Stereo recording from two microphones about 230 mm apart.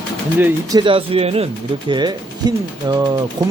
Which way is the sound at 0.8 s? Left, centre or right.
Right.